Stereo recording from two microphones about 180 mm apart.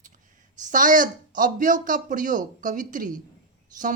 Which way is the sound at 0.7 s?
45° right (ahead or behind).